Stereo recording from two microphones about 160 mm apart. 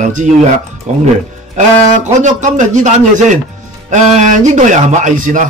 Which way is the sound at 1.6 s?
50° right (ahead or behind).